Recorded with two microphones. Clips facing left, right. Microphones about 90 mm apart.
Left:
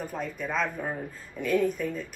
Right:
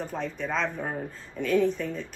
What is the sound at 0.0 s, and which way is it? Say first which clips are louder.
Speech: right 1 dB; 5° left (ahead or behind).